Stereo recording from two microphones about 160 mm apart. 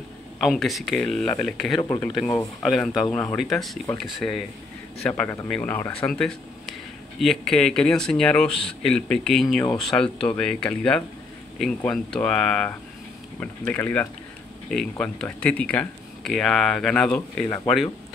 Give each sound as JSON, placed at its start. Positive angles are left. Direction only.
{"t": 0.4, "sound": "speech", "side_deg": 0}
{"t": 1.8, "sound": "speech", "side_deg": 20}
{"t": 2.6, "sound": "speech", "side_deg": 0}